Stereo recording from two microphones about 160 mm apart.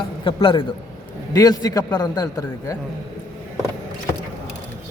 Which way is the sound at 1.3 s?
20° left (ahead or behind).